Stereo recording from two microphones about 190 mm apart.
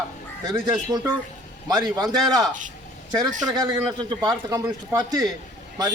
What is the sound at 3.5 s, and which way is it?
A man's voice, 20° right (ahead or behind).